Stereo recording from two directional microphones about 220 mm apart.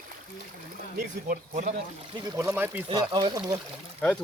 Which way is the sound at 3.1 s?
20° right (ahead or behind).